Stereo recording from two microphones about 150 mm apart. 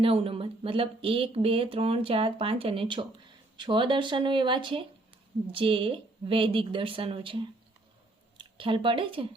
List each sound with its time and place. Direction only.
0.0 s speech: 40° right (ahead or behind)